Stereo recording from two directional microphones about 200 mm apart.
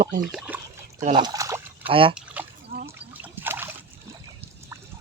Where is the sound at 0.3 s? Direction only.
5° right (ahead or behind).